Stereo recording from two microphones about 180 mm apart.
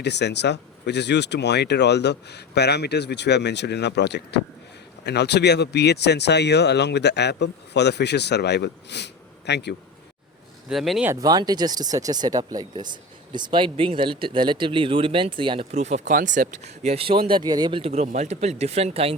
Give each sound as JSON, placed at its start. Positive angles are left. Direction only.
{"t": 0.0, "sound": "speech", "side_deg": 70}
{"t": 10.7, "sound": "speech", "side_deg": 0}
{"t": 11.1, "sound": "speech", "side_deg": -20}